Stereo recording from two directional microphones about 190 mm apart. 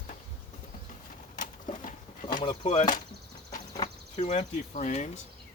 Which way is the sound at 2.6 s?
40° left (ahead or behind).